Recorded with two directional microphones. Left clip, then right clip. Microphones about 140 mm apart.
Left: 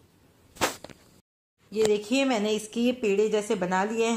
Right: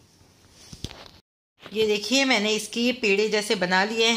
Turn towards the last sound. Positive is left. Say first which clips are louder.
# right 4 dB
turn(degrees=-5)  # may be behind; listen again after turning